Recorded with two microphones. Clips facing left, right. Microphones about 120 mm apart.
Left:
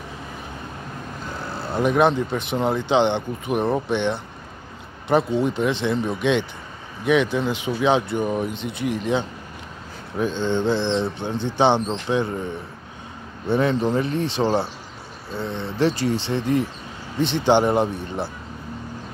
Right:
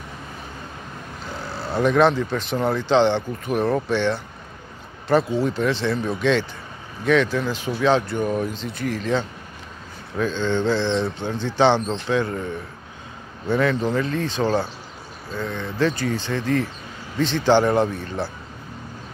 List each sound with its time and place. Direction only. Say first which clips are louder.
1.7 s speech: right 1 dB; 15° left (ahead or behind)
13.5 s speech: left 1 dB; 25° left (ahead or behind)